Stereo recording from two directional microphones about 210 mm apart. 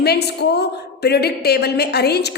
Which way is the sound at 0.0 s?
50° left (ahead or behind).